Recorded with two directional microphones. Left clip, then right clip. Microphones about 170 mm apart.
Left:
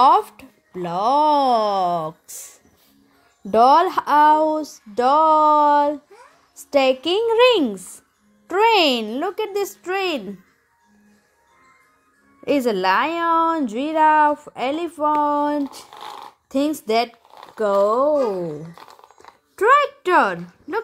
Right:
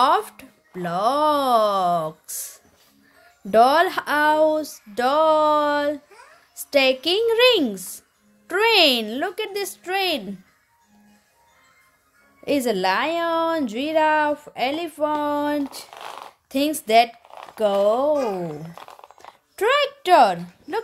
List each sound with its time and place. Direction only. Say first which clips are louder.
0.0 s a woman's voice: left 4 dB; centre (ahead or behind)
12.4 s a woman's voice: left 2 dB; centre (ahead or behind)
18.1 s speech: left 3 dB; 15° right (ahead or behind)
19.2 s a sound: left 5 dB; 5° right (ahead or behind)